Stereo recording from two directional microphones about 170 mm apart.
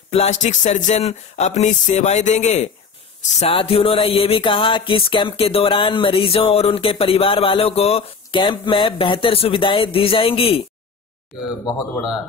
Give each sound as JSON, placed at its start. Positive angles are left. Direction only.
{"t": 0.1, "sound": "speech", "side_deg": 40}
{"t": 3.2, "sound": "music", "side_deg": 35}